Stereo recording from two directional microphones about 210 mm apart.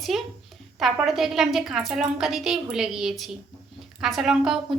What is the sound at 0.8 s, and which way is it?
A woman's voice, centre (ahead or behind).